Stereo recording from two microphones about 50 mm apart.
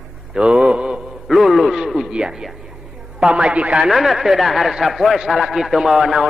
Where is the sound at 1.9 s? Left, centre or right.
Centre.